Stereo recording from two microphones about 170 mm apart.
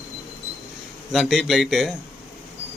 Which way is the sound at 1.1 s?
Centre (ahead or behind).